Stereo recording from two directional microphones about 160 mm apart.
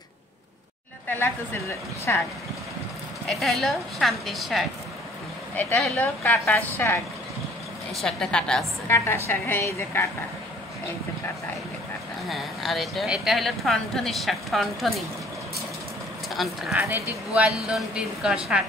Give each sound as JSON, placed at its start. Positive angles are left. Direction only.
{"t": 1.0, "sound": "a woman's voice", "side_deg": 15}
{"t": 3.3, "sound": "a woman's voice", "side_deg": 0}
{"t": 8.9, "sound": "a woman's voice", "side_deg": 15}
{"t": 12.3, "sound": "speech", "side_deg": 0}
{"t": 16.3, "sound": "speech", "side_deg": 0}